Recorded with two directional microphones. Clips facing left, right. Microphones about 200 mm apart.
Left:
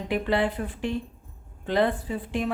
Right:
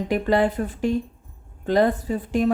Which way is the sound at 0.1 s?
45° right (ahead or behind).